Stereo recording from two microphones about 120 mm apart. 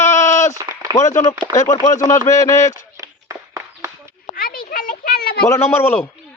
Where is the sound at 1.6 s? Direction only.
75° left (ahead or behind).